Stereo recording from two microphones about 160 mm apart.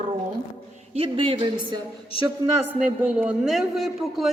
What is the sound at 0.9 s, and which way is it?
Speech, 35° right (ahead or behind).